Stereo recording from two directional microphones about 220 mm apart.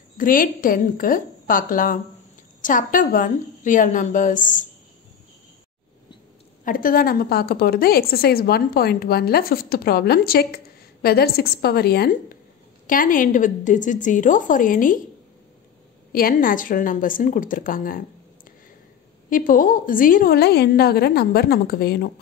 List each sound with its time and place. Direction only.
0.2 s a woman's voice: 40° left (ahead or behind)
6.6 s a woman's voice: 40° left (ahead or behind)
16.1 s a woman's voice: 40° left (ahead or behind)